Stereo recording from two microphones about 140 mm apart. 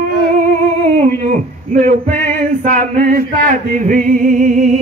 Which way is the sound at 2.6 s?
60° right (ahead or behind).